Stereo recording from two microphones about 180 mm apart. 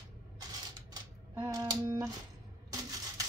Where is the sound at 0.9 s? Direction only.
20° right (ahead or behind).